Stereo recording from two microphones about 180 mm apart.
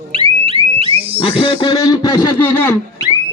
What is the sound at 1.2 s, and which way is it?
Speech, 30° left (ahead or behind).